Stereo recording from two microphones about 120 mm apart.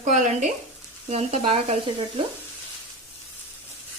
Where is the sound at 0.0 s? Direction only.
80° right.